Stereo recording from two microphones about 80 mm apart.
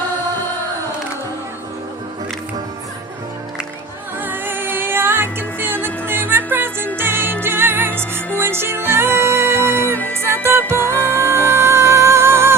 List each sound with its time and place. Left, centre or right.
4.2 s music: right